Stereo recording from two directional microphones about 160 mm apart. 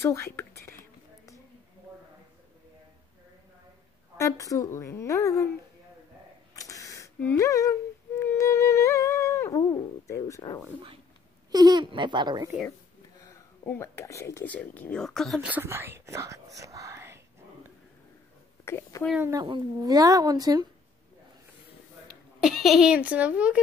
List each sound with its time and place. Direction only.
0.0 s speech: 15° left (ahead or behind)
4.2 s a woman's voice: 20° left (ahead or behind)
6.5 s a sound: 20° left (ahead or behind)
7.2 s a woman's voice: 15° left (ahead or behind)
8.2 s humming: 20° left (ahead or behind)
11.5 s speech: 25° right (ahead or behind)
13.2 s speech: 15° left (ahead or behind)
15.4 s speech: 15° right (ahead or behind)
18.7 s speech: 15° left (ahead or behind)
19.4 s speech: 25° right (ahead or behind)
22.0 s speech: centre (ahead or behind)